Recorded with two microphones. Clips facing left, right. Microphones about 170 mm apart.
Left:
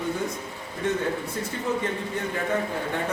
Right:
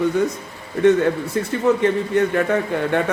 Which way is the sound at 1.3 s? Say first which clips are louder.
Right 10 dB; 70° right (ahead or behind).